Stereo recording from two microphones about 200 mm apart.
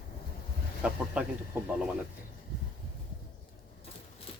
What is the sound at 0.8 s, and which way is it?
Speech, 5° right (ahead or behind).